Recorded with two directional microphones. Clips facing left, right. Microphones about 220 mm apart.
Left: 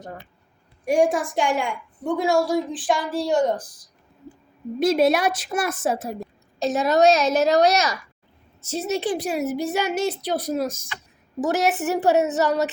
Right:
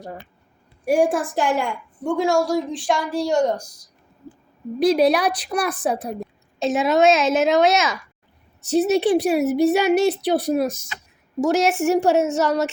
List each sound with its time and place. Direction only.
0.9 s a woman's voice: 5° right (ahead or behind)
4.8 s a woman's voice: centre (ahead or behind)
8.8 s speech: 15° right (ahead or behind)
9.0 s a woman's voice: 65° right (ahead or behind)
10.5 s speech: 15° right (ahead or behind)
11.3 s a woman's voice: centre (ahead or behind)